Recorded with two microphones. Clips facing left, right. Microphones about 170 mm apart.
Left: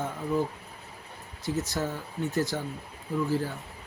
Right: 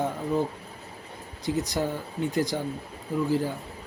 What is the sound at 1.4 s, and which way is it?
Speech, 15° right (ahead or behind).